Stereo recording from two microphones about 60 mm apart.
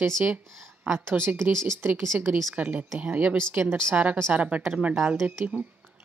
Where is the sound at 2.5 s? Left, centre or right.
Right.